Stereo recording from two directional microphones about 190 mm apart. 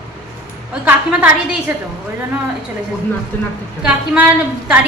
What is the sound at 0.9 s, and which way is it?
Speech, 10° right (ahead or behind).